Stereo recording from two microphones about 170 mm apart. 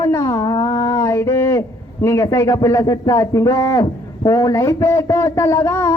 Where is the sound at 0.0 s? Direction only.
20° left (ahead or behind).